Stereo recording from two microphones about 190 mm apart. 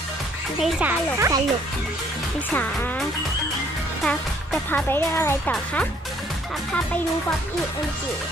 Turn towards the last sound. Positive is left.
turn(degrees=5)  # may be behind; listen again after turning